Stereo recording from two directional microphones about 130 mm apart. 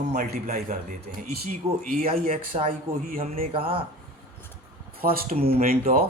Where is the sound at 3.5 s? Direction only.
45° right (ahead or behind).